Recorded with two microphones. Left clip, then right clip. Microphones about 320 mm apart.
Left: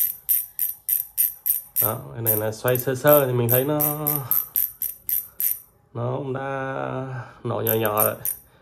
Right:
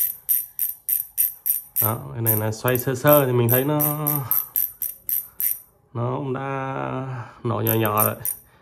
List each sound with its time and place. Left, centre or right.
0.0 s jingle bell: centre
1.9 s speech: right
5.9 s speech: right